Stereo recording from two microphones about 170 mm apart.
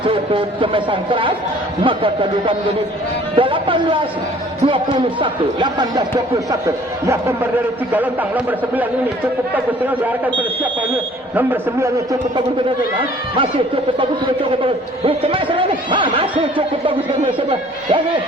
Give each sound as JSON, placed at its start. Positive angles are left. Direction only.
{"t": 0.0, "sound": "speech", "side_deg": -30}
{"t": 3.3, "sound": "a man's voice", "side_deg": -30}
{"t": 8.4, "sound": "a man's voice", "side_deg": -10}
{"t": 11.3, "sound": "a man's voice", "side_deg": -15}
{"t": 14.6, "sound": "speech", "side_deg": -30}